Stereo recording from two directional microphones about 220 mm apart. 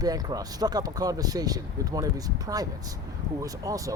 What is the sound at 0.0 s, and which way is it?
Speech, 15° right (ahead or behind).